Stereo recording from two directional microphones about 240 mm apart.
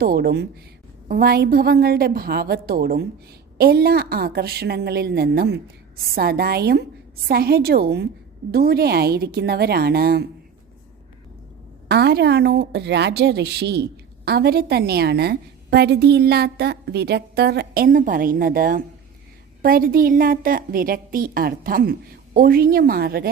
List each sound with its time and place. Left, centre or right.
0.0 s a woman's voice: right
11.9 s a woman's voice: right